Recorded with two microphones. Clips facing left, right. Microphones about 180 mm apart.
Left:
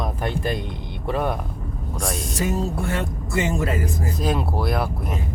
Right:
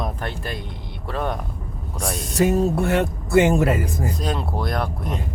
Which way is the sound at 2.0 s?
Centre (ahead or behind).